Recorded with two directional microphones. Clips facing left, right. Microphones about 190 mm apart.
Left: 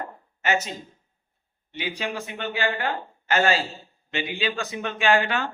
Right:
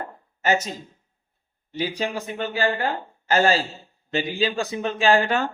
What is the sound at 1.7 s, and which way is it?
Speech, 40° right (ahead or behind).